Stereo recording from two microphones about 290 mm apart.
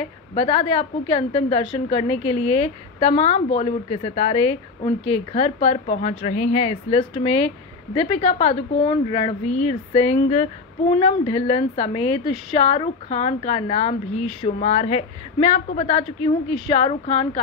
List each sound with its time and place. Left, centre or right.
0.0 s a woman's voice: centre